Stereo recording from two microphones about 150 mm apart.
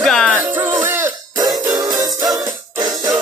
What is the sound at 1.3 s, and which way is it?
Music, 25° right (ahead or behind).